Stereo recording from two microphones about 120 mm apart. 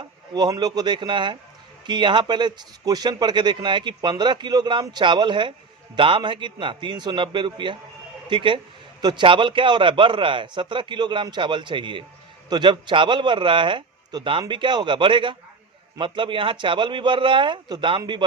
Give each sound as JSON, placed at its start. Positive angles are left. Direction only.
{"t": 0.3, "sound": "a man's voice", "side_deg": -35}